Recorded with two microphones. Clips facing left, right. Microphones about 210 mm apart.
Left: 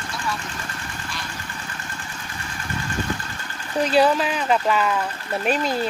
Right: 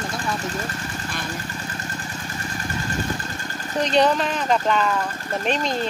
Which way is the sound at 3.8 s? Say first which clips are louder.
Left 1 dB; 5° left (ahead or behind).